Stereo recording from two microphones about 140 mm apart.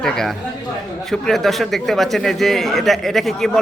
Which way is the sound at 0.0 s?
5° left (ahead or behind).